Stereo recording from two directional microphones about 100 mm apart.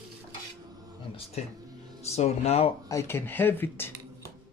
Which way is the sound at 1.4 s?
90° left.